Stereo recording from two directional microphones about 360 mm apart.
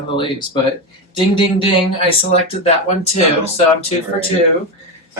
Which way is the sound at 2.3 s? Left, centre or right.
Centre.